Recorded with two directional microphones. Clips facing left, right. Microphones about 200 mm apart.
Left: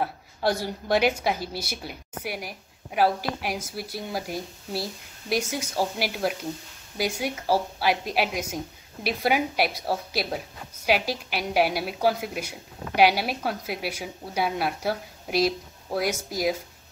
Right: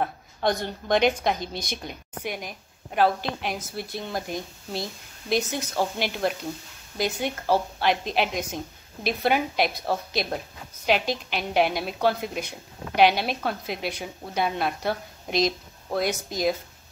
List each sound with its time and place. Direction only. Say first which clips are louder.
0.0 s a woman's voice: even; 5° left (ahead or behind)